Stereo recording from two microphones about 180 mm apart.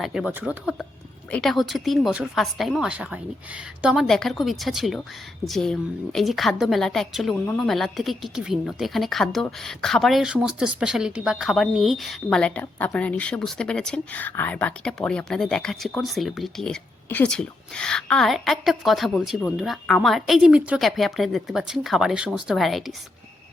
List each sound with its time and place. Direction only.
0.0 s a woman's voice: 5° right (ahead or behind)